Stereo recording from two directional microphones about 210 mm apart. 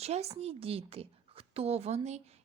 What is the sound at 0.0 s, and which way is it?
A woman's voice, 30° right (ahead or behind).